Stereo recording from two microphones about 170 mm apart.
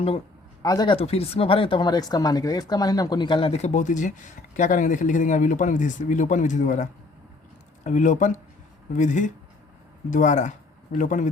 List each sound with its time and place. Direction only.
0.6 s speech: 25° left (ahead or behind); by 6.8 s 50° left (ahead or behind)
7.9 s speech: 45° left (ahead or behind)